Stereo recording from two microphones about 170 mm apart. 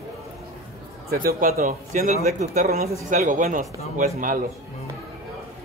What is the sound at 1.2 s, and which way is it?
Speech, 55° right (ahead or behind).